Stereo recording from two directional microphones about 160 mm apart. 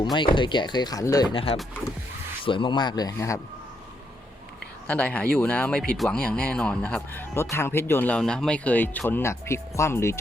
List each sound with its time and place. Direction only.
0.0 s speech: 30° left (ahead or behind)
4.9 s speech: 10° left (ahead or behind)